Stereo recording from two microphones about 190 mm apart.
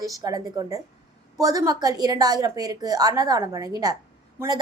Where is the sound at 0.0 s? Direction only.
20° right (ahead or behind).